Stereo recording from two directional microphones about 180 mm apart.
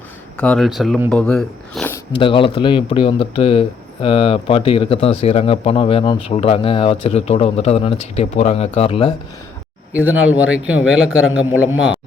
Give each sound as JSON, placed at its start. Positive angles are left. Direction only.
{"t": 0.3, "sound": "speech", "side_deg": 5}
{"t": 2.1, "sound": "speech", "side_deg": 25}
{"t": 9.9, "sound": "a man's voice", "side_deg": -10}